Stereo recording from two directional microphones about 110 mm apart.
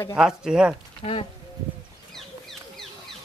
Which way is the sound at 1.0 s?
60° left (ahead or behind).